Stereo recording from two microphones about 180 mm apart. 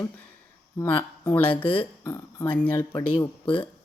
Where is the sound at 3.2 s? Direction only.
30° left (ahead or behind).